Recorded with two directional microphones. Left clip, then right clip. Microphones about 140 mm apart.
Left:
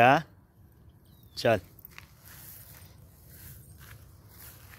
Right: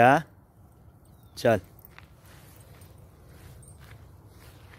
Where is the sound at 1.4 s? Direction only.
25° right (ahead or behind).